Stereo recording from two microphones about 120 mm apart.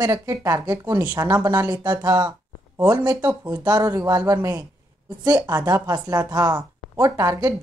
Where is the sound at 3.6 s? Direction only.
35° right (ahead or behind).